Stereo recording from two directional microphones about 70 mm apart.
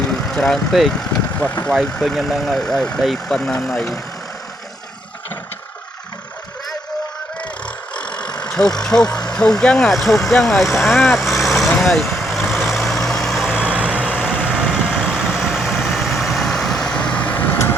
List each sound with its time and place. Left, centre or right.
0.3 s speech: centre
1.4 s speech: left
1.7 s speech: centre
7.9 s speech: centre
11.8 s vehicle: centre
13.6 s vehicle: centre; by 17.6 s left